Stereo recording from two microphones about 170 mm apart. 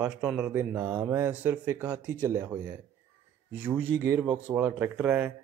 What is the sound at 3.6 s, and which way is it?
Speech, 10° right (ahead or behind).